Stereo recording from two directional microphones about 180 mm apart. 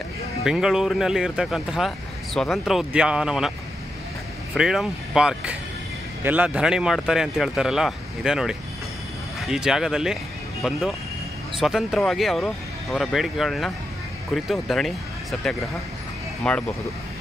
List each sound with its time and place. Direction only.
0.4 s speech: 5° right (ahead or behind)
4.6 s speech: centre (ahead or behind)
11.6 s speech: centre (ahead or behind)